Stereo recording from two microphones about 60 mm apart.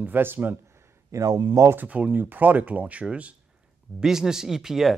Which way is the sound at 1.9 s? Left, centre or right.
Right.